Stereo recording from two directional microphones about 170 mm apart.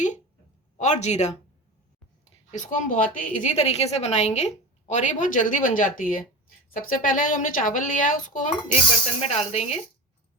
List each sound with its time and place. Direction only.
0.8 s speech: 45° left (ahead or behind)
2.5 s a woman's voice: 45° left (ahead or behind)
9.2 s speech: 40° left (ahead or behind)